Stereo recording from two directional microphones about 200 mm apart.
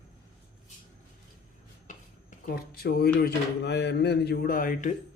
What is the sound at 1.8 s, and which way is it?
Speech, 45° left (ahead or behind).